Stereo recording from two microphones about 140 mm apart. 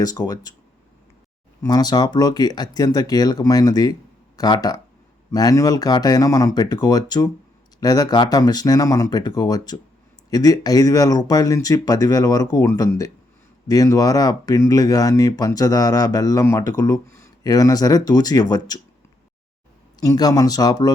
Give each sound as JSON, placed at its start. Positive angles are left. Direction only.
{"t": 0.0, "sound": "speech", "side_deg": 25}
{"t": 1.6, "sound": "speech", "side_deg": 30}
{"t": 20.0, "sound": "speech", "side_deg": 30}